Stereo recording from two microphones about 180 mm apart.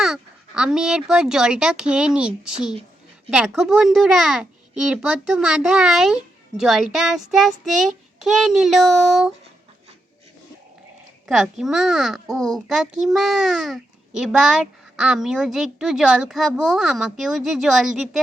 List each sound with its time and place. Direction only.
0.0 s a child's voice: 5° right (ahead or behind)
11.3 s a child's voice: centre (ahead or behind)